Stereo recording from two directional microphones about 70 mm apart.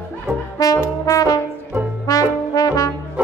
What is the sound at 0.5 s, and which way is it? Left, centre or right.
Trombone, left.